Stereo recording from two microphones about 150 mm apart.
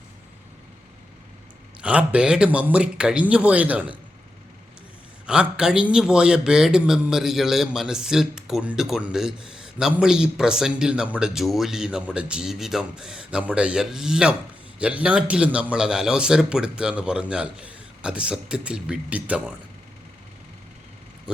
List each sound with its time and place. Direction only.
1.8 s a man's voice: 10° right (ahead or behind)
5.2 s a man's voice: 5° right (ahead or behind)